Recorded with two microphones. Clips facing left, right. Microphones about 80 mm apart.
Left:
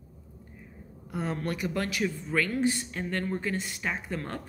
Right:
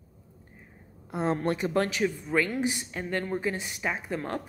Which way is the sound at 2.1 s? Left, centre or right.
Centre.